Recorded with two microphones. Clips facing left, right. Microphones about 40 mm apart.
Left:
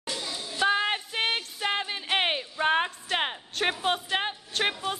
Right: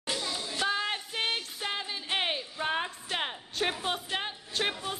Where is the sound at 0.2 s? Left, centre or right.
Centre.